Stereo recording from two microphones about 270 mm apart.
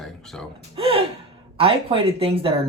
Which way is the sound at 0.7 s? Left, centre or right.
Centre.